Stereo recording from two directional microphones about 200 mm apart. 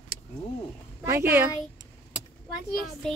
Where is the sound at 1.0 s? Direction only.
15° right (ahead or behind).